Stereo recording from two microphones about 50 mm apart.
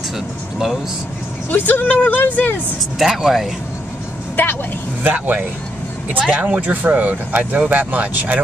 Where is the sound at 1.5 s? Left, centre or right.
Left.